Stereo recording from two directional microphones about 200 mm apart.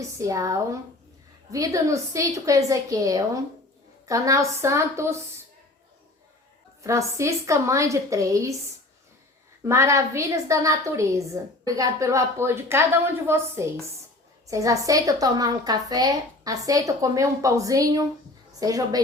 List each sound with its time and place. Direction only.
0.2 s a woman's voice: 15° right (ahead or behind)
6.8 s a woman's voice: 15° right (ahead or behind)
9.6 s a woman's voice: 15° right (ahead or behind)